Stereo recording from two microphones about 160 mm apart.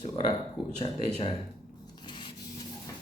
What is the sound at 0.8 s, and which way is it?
Speech, 35° left (ahead or behind).